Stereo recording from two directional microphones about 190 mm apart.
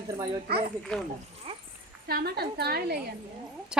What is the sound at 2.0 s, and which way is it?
Speech, 55° right (ahead or behind).